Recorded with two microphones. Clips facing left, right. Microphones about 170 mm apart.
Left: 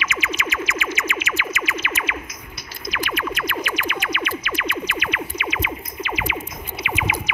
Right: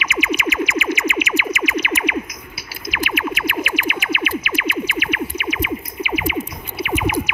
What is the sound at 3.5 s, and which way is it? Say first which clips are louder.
Music: right 3 dB; 5° right (ahead or behind).